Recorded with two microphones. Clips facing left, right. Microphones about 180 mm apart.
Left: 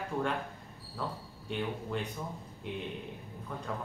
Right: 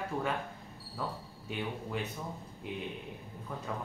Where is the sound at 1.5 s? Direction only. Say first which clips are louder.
Left 3 dB; 5° right (ahead or behind).